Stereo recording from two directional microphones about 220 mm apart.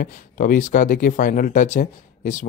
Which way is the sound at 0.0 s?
40° left (ahead or behind).